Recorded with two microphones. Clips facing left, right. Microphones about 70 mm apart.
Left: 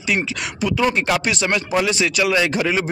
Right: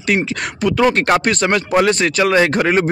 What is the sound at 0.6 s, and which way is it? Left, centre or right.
Speech, right.